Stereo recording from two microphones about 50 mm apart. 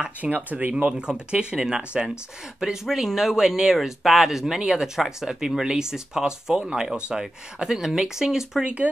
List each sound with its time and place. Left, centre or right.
0.2 s speech: right
0.8 s speech: centre
2.6 s speech: centre